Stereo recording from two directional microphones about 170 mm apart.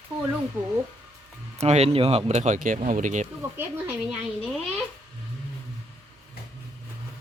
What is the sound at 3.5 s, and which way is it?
Speech, 10° right (ahead or behind).